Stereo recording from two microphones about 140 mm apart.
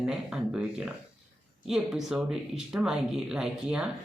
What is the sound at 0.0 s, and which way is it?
Speech, 5° right (ahead or behind).